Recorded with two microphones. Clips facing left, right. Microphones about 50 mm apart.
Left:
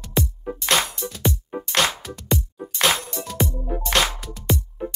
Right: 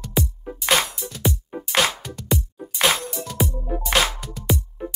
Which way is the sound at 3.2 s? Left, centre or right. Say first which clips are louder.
Even; left.